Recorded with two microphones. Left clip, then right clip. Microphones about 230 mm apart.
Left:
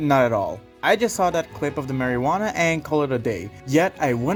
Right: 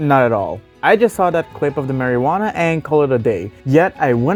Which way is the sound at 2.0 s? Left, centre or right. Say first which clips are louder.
Right 5 dB; right.